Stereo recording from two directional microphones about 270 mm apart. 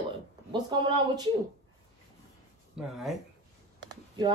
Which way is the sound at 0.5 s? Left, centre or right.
Centre.